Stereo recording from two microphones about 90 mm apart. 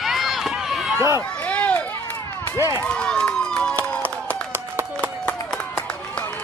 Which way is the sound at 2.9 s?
10° left (ahead or behind).